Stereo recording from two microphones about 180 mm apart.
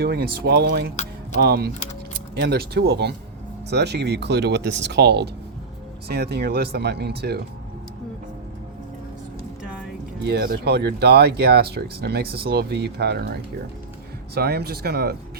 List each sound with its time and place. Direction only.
0.0 s speech: 60° right (ahead or behind)
9.6 s music: 5° right (ahead or behind)
10.2 s speech: 65° right (ahead or behind)